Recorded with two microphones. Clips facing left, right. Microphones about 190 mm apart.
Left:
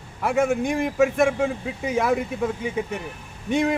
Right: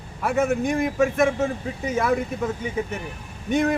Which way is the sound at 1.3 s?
10° left (ahead or behind).